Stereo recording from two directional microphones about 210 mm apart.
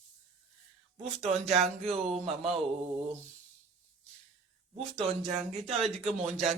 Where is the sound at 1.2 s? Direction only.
30° right (ahead or behind).